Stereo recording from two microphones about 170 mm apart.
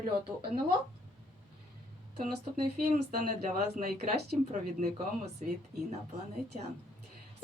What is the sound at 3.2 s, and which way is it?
Speech, 55° right (ahead or behind).